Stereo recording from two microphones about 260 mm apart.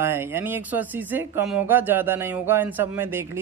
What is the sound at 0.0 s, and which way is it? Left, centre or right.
A man's voice, centre.